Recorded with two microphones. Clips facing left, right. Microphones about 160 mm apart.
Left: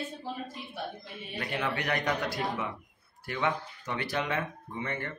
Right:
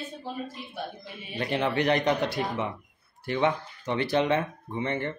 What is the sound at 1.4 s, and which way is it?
Speech, 25° right (ahead or behind).